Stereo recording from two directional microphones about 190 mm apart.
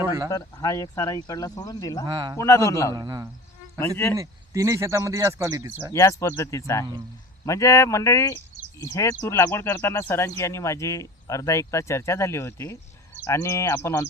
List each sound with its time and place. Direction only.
0.0 s a sound: 15° right (ahead or behind)
0.3 s speech: 20° left (ahead or behind)
2.0 s speech: 20° right (ahead or behind)
2.4 s speech: 15° left (ahead or behind)
2.9 s speech: 20° right (ahead or behind)
3.8 s speech: 10° left (ahead or behind)
4.2 s speech: 15° right (ahead or behind)
5.9 s speech: 15° left (ahead or behind)